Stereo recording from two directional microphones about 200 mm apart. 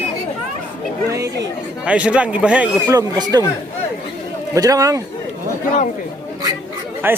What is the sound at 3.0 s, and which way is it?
Speech, 20° right (ahead or behind).